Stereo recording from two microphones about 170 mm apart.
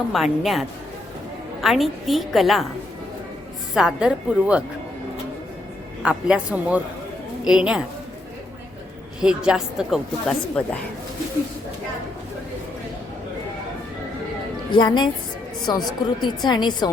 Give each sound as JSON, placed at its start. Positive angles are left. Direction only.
{"t": 0.1, "sound": "a woman's voice", "side_deg": 0}
{"t": 1.6, "sound": "a woman's voice", "side_deg": 0}
{"t": 3.8, "sound": "a woman's voice", "side_deg": -5}
{"t": 6.0, "sound": "a woman's voice", "side_deg": -5}
{"t": 9.2, "sound": "a woman's voice", "side_deg": -5}
{"t": 14.7, "sound": "a woman's voice", "side_deg": 25}